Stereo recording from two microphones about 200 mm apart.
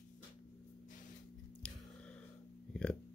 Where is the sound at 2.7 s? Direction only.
5° left (ahead or behind).